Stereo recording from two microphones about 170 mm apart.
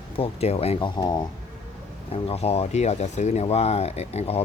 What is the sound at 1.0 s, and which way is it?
Speech, 25° left (ahead or behind).